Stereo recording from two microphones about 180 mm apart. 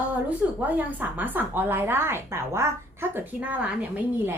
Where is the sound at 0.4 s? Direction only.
10° right (ahead or behind).